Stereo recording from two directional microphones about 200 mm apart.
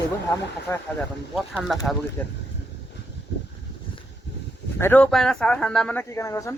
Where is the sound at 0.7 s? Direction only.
15° left (ahead or behind).